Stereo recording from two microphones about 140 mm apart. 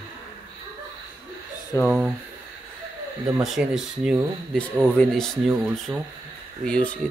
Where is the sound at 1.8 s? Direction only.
5° right (ahead or behind).